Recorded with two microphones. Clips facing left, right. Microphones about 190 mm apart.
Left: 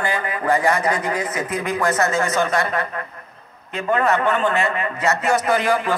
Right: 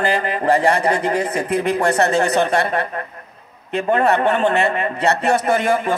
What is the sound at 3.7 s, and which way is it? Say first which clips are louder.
Speech: right 3 dB; 60° right (ahead or behind).